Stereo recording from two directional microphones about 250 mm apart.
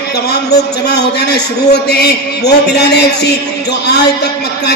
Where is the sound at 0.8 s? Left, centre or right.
Left.